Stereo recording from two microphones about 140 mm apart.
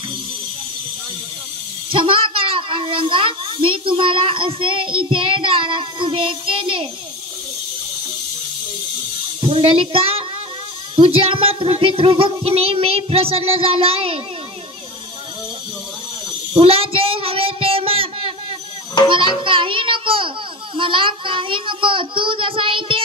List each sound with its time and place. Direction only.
1.9 s a child's voice: 40° right (ahead or behind)
9.4 s a child's voice: 40° right (ahead or behind)
16.5 s child singing: 40° right (ahead or behind)
19.0 s a child's voice: 30° left (ahead or behind)
19.4 s a child's voice: 35° right (ahead or behind)